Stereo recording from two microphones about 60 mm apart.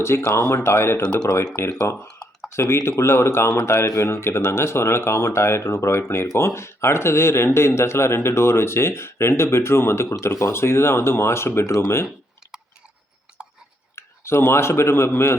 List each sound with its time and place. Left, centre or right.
0.1 s speech: left
2.0 s a sound: centre
2.6 s speech: left
13.9 s speech: left